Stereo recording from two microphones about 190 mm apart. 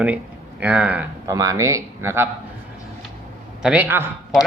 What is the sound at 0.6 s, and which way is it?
Speech, 10° right (ahead or behind).